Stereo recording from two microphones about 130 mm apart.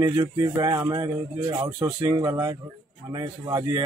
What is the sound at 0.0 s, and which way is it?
A man's voice, 35° right (ahead or behind).